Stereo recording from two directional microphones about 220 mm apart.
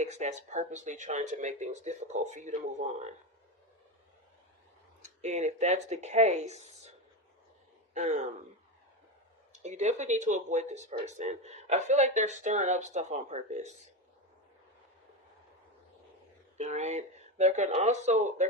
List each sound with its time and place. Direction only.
0.0 s speech: 30° right (ahead or behind)
5.0 s speech: 30° right (ahead or behind)
7.9 s speech: 30° right (ahead or behind)
9.5 s speech: 30° right (ahead or behind)
16.6 s speech: 30° right (ahead or behind)